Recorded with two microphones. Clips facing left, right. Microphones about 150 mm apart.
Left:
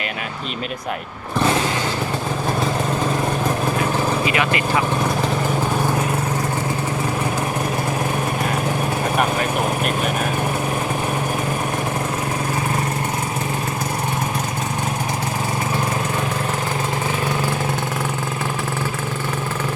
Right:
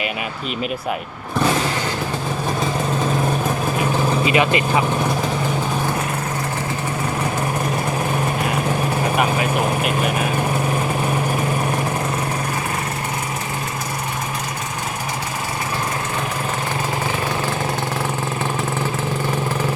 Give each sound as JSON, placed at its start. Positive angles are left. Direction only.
{"t": 4.3, "sound": "speech", "side_deg": -20}
{"t": 9.1, "sound": "speech", "side_deg": -5}